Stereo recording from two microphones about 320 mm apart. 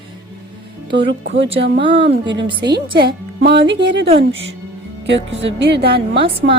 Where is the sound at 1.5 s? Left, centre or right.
Right.